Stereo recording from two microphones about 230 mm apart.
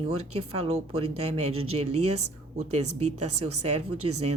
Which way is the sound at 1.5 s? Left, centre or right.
Right.